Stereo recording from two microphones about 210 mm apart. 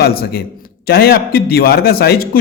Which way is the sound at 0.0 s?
45° left (ahead or behind).